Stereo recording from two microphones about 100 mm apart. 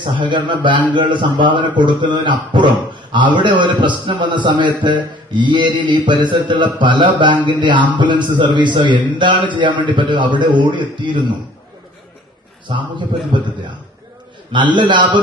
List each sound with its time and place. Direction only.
0.0 s a man's voice: 50° right (ahead or behind)
12.6 s a man's voice: 50° right (ahead or behind)
14.5 s a man's voice: 50° right (ahead or behind)